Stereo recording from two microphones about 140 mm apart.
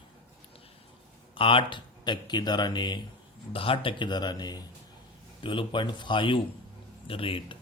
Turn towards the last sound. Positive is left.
turn(degrees=40)  # may be behind; listen again after turning